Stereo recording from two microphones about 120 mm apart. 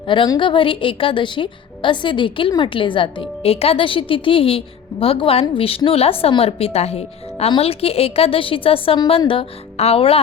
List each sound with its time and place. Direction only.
0.3 s a woman's voice: 45° left (ahead or behind)